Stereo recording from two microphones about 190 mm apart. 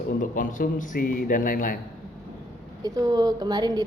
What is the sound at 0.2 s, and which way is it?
A man's voice, 45° left (ahead or behind).